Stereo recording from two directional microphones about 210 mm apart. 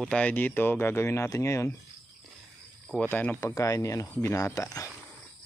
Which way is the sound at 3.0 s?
10° left (ahead or behind).